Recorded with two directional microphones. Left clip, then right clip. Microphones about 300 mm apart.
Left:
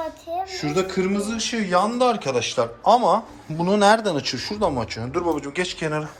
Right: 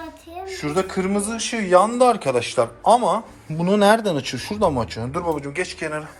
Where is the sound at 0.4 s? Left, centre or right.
Centre.